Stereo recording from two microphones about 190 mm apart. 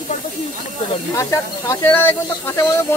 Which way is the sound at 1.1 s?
15° left (ahead or behind).